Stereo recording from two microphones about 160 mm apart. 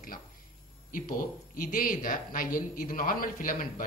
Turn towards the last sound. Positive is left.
turn(degrees=60)  # may be behind; listen again after turning